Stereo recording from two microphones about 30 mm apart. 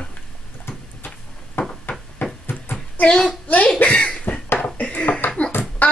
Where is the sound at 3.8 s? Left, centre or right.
Left.